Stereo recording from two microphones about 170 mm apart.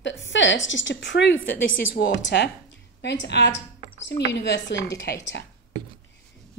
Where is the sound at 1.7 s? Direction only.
75° left (ahead or behind).